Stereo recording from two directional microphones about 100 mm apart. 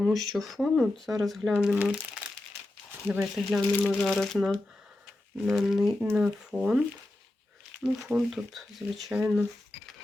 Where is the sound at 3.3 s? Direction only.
5° right (ahead or behind).